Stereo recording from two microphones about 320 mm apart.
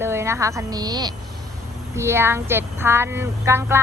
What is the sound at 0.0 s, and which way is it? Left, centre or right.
Speech, centre.